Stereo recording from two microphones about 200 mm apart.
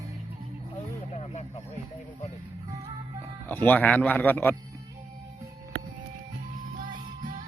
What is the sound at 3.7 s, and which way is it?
Speech, 5° left (ahead or behind).